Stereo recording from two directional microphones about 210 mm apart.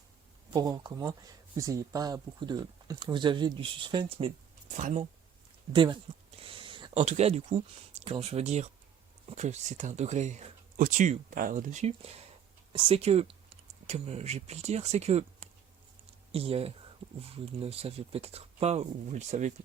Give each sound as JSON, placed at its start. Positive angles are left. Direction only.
{"t": 0.5, "sound": "speech", "side_deg": -20}
{"t": 4.8, "sound": "speech", "side_deg": -35}
{"t": 5.7, "sound": "a sound", "side_deg": -25}
{"t": 7.0, "sound": "speech", "side_deg": -30}